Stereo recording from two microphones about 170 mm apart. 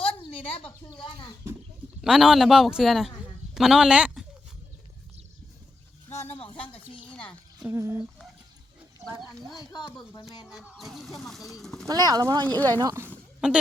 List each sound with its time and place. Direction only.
0.2 s a sound: 30° left (ahead or behind)
2.0 s speech: 5° right (ahead or behind)
6.2 s speech: 35° left (ahead or behind)
7.2 s a sound: 5° left (ahead or behind)
7.7 s speech: 15° right (ahead or behind)
9.6 s speech: 25° left (ahead or behind)
10.4 s speech: 5° right (ahead or behind)
11.6 s pigeon: centre (ahead or behind)
11.9 s speech: 25° right (ahead or behind)
12.5 s speech: 10° left (ahead or behind)
12.8 s speech: 20° right (ahead or behind)
13.4 s speech: 5° right (ahead or behind)